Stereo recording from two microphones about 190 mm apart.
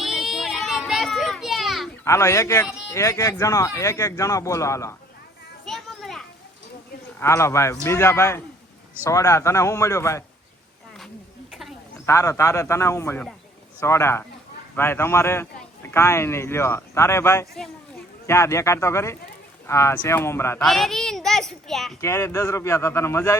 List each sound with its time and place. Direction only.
0.0 s children playing: centre (ahead or behind)
2.0 s speech: 15° left (ahead or behind)
5.6 s children playing: centre (ahead or behind)
7.2 s speech: 15° left (ahead or behind)
12.0 s speech: 15° left (ahead or behind)
20.6 s a child's voice: centre (ahead or behind)
22.0 s speech: 15° left (ahead or behind)